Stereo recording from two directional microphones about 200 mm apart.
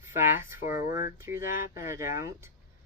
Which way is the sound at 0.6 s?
40° left (ahead or behind).